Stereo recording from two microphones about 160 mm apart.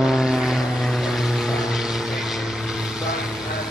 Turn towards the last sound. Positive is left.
turn(degrees=-5)  # may be behind; listen again after turning